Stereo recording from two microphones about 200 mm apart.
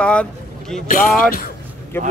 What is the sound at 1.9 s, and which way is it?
Speech, 10° left (ahead or behind).